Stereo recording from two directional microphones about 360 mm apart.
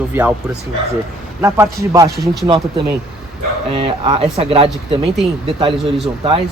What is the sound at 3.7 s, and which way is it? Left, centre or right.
Speech, centre.